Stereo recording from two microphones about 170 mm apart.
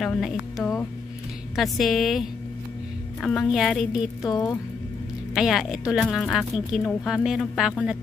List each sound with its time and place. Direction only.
0.0 s a woman's voice: centre (ahead or behind)
4.2 s speech: 20° left (ahead or behind)
5.3 s a woman's voice: centre (ahead or behind)